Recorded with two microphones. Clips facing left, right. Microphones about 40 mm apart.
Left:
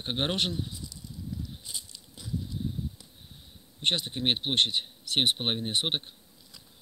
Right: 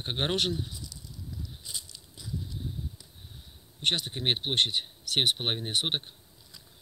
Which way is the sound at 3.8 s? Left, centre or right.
Left.